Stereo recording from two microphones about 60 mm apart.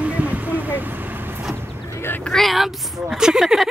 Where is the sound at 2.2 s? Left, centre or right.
Centre.